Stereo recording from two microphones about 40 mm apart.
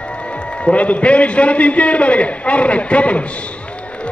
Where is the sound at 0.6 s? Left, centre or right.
Left.